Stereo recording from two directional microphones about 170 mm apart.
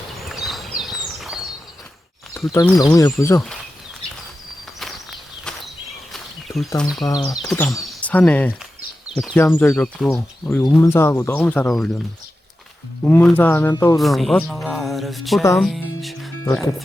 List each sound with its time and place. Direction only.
0.2 s a sound: centre (ahead or behind)
2.3 s speech: 20° left (ahead or behind)
6.1 s a sound: centre (ahead or behind)
7.0 s speech: 20° left (ahead or behind); by 10.8 s centre (ahead or behind)
10.8 s speech: 15° left (ahead or behind)
13.1 s speech: 10° left (ahead or behind)
14.0 s speech: centre (ahead or behind)
15.5 s music: centre (ahead or behind)